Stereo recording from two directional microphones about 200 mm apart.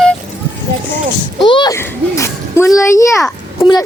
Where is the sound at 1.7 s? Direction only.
15° left (ahead or behind).